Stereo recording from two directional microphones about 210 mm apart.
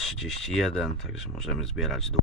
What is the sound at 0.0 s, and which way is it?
Speech, centre (ahead or behind).